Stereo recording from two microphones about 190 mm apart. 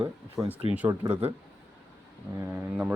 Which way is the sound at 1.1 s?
30° right (ahead or behind).